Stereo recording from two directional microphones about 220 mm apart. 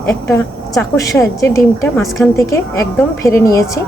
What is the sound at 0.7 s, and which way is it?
Speech, 15° left (ahead or behind).